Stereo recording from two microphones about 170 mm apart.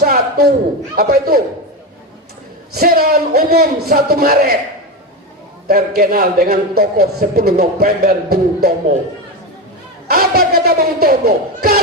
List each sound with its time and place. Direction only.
0.0 s a sound: 60° right (ahead or behind)
0.9 s a man's voice: 60° right (ahead or behind)
2.7 s a man's voice: 60° right (ahead or behind)
5.6 s a man's voice: 60° right (ahead or behind)
10.1 s a man's voice: 65° right (ahead or behind)